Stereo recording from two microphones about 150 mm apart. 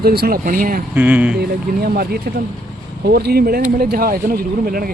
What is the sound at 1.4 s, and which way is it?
Speech, 90° right.